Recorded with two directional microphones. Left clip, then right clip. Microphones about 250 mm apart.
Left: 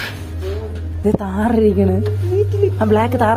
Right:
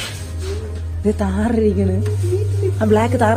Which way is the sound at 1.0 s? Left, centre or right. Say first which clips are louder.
Left 2 dB; centre.